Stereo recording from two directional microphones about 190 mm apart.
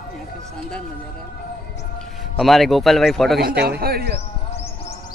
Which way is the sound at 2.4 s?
Centre (ahead or behind).